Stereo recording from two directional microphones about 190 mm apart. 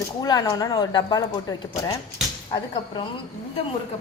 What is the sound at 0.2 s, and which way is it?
Speech, 20° left (ahead or behind).